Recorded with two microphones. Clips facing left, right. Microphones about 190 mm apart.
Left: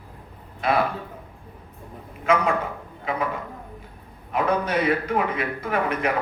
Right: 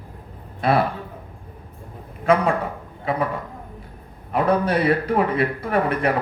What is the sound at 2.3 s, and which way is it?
A man's voice, 35° right (ahead or behind).